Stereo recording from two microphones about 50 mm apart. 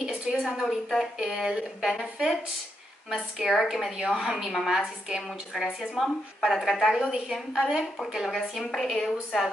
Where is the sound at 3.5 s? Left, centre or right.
Centre.